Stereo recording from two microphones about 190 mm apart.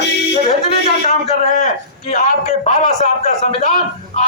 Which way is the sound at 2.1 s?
35° left (ahead or behind).